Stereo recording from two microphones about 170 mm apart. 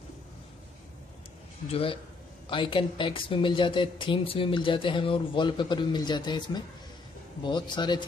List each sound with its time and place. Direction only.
1.7 s a man's voice: 35° left (ahead or behind)